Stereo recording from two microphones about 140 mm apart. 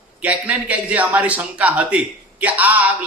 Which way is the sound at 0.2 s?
10° right (ahead or behind).